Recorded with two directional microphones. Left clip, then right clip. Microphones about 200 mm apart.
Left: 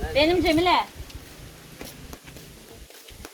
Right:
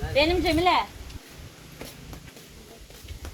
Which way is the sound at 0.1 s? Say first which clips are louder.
Left 2 dB; 20° left (ahead or behind).